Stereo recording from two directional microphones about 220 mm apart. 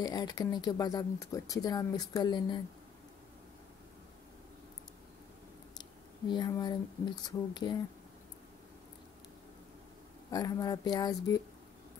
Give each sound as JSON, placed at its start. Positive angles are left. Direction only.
{"t": 0.0, "sound": "speech", "side_deg": 20}
{"t": 5.8, "sound": "a sound", "side_deg": 20}
{"t": 7.2, "sound": "speech", "side_deg": 20}
{"t": 10.3, "sound": "speech", "side_deg": 15}